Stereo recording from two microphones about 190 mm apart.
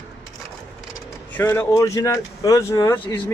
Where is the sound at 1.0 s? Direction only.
10° left (ahead or behind).